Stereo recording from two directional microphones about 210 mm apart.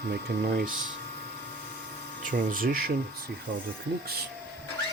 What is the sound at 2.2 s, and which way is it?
Speech, 40° right (ahead or behind).